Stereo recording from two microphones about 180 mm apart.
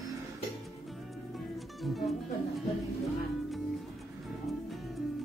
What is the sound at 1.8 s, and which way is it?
Music, centre (ahead or behind).